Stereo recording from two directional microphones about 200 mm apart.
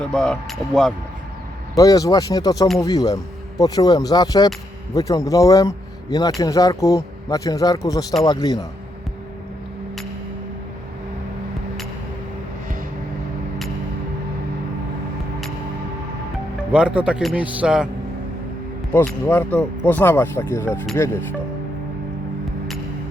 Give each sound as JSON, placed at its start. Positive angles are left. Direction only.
{"t": 0.0, "sound": "speech", "side_deg": 0}
{"t": 1.7, "sound": "speech", "side_deg": 15}
{"t": 16.7, "sound": "speech", "side_deg": -5}
{"t": 18.9, "sound": "speech", "side_deg": 10}